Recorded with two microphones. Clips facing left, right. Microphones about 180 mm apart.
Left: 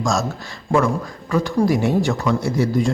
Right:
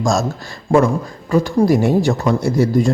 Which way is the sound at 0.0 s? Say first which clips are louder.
Right 4 dB; 35° right (ahead or behind).